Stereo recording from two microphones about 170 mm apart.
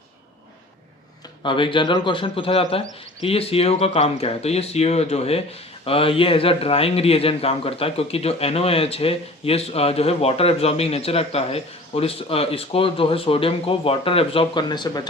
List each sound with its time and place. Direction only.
1.4 s speech: 30° left (ahead or behind)